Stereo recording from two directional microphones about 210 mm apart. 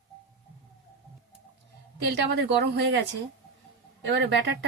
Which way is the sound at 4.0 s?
55° right (ahead or behind).